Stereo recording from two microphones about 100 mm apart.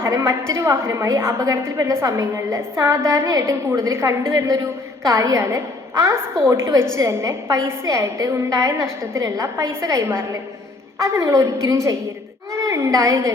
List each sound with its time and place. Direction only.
0.0 s a woman's voice: 30° right (ahead or behind)